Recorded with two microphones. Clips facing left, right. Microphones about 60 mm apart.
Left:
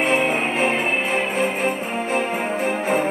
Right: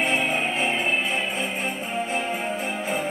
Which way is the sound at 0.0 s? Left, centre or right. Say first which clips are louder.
Left 4 dB; left.